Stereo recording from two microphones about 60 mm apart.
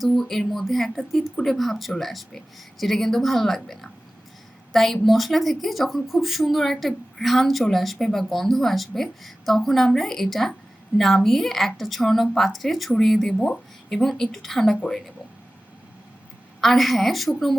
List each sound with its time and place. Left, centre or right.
0.0 s a woman's voice: centre
16.6 s a woman's voice: centre